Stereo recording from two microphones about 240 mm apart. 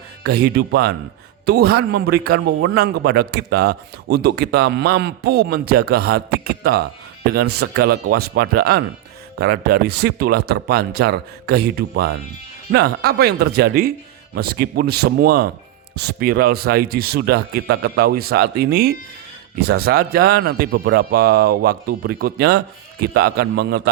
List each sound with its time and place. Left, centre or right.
0.2 s a man's voice: right